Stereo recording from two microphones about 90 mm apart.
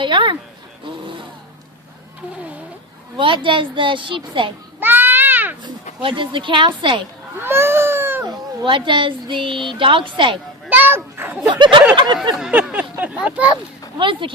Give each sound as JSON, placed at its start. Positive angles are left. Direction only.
{"t": 0.0, "sound": "speech", "side_deg": -60}
{"t": 3.2, "sound": "a woman's voice", "side_deg": -70}
{"t": 4.8, "sound": "baby cry", "side_deg": -20}
{"t": 5.6, "sound": "speech", "side_deg": -70}
{"t": 7.4, "sound": "baby cry", "side_deg": -25}
{"t": 8.6, "sound": "a woman's voice", "side_deg": -65}
{"t": 10.7, "sound": "speech", "side_deg": -20}
{"t": 11.4, "sound": "speech", "side_deg": -65}
{"t": 12.4, "sound": "a sound", "side_deg": -10}
{"t": 14.0, "sound": "a woman's voice", "side_deg": -70}